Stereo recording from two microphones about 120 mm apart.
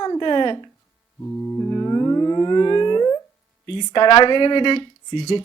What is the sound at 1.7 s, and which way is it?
Music, 30° left (ahead or behind).